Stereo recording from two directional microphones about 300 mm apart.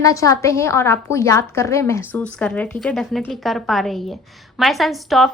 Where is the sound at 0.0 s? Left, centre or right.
Centre.